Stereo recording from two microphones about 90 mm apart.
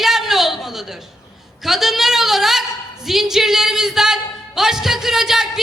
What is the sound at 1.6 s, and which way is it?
A woman's voice, 5° right (ahead or behind).